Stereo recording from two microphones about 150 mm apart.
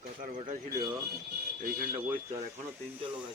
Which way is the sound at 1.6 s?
75° right (ahead or behind).